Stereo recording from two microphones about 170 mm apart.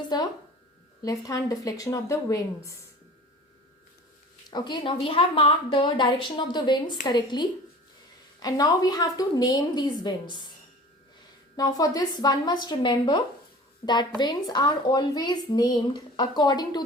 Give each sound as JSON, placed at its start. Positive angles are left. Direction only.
{"t": 1.0, "sound": "speech", "side_deg": 20}
{"t": 4.5, "sound": "speech", "side_deg": 25}
{"t": 11.5, "sound": "speech", "side_deg": 20}